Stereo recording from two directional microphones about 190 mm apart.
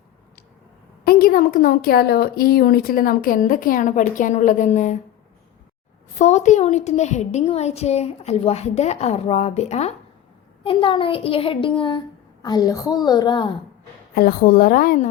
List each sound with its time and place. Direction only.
1.0 s a woman's voice: 50° left (ahead or behind)
6.1 s a woman's voice: 35° left (ahead or behind)
14.2 s a woman's voice: 50° left (ahead or behind)